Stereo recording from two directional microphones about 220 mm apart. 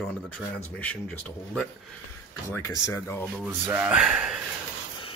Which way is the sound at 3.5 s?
10° right (ahead or behind).